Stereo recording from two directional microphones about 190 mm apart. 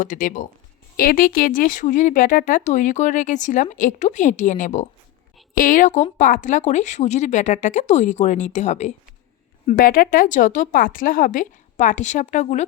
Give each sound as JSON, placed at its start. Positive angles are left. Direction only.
{"t": 0.0, "sound": "speech", "side_deg": 45}